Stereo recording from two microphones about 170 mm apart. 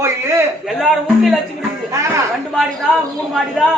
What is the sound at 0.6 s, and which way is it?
Speech, centre (ahead or behind).